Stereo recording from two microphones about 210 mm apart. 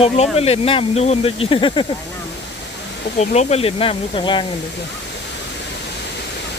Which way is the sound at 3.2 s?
30° left (ahead or behind).